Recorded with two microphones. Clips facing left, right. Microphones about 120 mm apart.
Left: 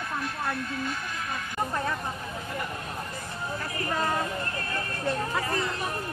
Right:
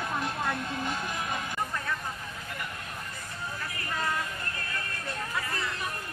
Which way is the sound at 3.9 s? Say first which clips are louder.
Left 4 dB; 35° left (ahead or behind).